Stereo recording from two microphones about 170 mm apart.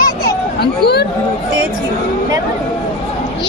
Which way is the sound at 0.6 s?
70° left (ahead or behind).